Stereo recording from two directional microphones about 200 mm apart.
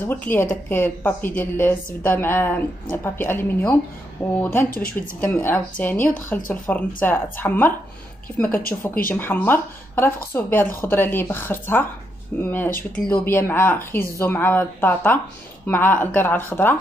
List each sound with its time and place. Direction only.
0.0 s speech: 10° left (ahead or behind)
4.6 s speech: 45° left (ahead or behind)
5.2 s speech: 10° left (ahead or behind)
9.1 s speech: 10° left (ahead or behind)